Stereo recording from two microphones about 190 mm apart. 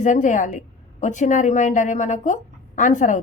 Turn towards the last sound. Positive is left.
turn(degrees=40)  # may be behind; listen again after turning